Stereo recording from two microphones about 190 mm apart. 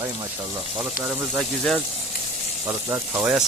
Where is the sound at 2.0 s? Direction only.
35° left (ahead or behind).